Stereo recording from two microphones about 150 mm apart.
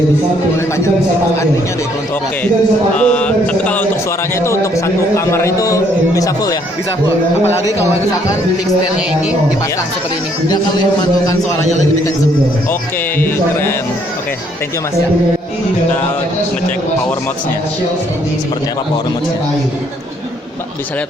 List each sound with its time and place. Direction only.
3.0 s mantra: 10° left (ahead or behind)
4.4 s a man's voice: 20° left (ahead or behind)
13.1 s mantra: 15° left (ahead or behind)